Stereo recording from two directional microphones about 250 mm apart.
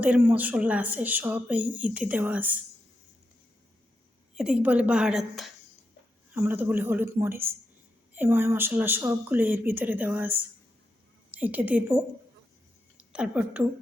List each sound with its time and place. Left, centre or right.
0.0 s a woman's voice: centre
4.4 s a woman's voice: centre
13.1 s a woman's voice: centre